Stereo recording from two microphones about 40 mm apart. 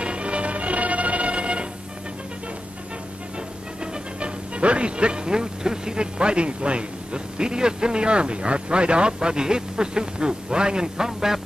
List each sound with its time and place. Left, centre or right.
0.0 s music: right
3.8 s speech: right; by 11.4 s centre